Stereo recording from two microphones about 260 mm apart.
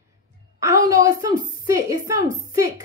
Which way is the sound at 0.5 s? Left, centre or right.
Centre.